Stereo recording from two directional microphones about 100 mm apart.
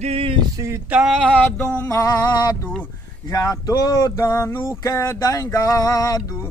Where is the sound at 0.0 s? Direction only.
80° right.